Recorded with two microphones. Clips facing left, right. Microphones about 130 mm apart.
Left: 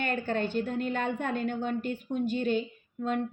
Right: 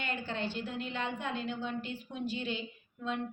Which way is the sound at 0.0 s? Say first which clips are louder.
Left 7 dB; 50° left (ahead or behind).